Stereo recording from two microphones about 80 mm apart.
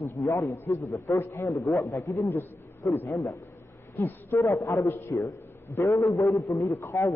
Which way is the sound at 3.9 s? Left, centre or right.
Left.